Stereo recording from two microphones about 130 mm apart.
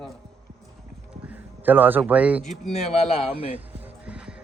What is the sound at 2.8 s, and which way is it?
Speech, 50° left (ahead or behind).